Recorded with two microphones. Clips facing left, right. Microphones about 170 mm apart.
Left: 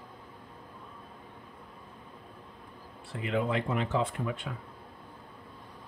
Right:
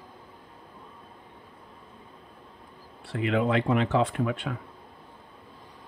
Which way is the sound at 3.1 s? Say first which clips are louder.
Right 5 dB; 75° right (ahead or behind).